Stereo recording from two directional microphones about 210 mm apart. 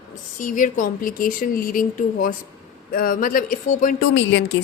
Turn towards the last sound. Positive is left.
turn(degrees=60)  # may be behind; listen again after turning